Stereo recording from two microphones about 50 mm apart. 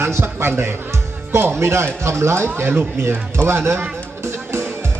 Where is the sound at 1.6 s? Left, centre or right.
Right.